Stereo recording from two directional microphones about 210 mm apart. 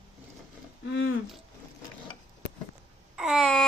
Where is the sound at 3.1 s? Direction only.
Centre (ahead or behind).